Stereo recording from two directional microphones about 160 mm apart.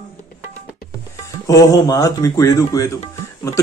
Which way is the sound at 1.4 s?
20° left (ahead or behind).